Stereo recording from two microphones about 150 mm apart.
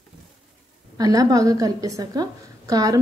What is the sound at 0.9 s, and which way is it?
A woman's voice, 25° right (ahead or behind).